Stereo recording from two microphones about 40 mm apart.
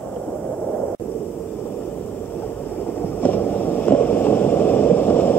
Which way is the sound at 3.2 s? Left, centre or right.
Left.